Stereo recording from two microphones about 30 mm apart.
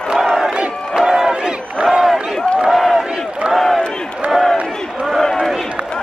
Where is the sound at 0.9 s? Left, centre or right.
Centre.